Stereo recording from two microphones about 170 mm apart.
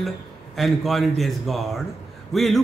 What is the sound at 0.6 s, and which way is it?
A man's voice, centre (ahead or behind).